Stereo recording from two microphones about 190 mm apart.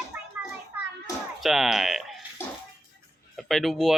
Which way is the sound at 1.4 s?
Centre (ahead or behind).